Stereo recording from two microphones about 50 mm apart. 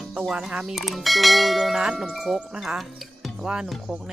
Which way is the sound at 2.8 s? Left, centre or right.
Centre.